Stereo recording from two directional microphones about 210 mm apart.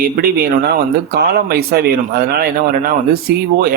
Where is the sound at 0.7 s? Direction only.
45° right (ahead or behind).